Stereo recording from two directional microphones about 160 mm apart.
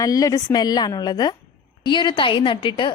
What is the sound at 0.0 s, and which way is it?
A woman's voice, 20° left (ahead or behind).